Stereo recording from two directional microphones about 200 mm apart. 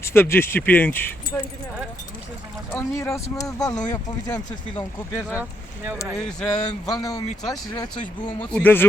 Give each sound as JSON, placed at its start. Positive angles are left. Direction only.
{"t": 0.0, "sound": "speech", "side_deg": 10}
{"t": 2.7, "sound": "speech", "side_deg": 15}
{"t": 6.9, "sound": "speech", "side_deg": 20}
{"t": 8.5, "sound": "speech", "side_deg": 10}